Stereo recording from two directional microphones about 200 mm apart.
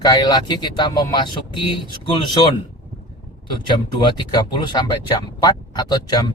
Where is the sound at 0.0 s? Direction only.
20° left (ahead or behind).